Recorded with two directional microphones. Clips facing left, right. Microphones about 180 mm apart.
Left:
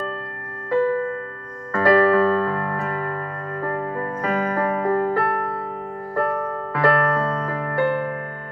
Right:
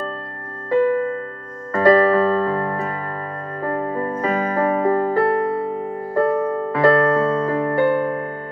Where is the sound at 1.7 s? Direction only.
20° right (ahead or behind).